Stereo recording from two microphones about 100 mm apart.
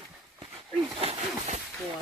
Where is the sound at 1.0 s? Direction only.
90° right.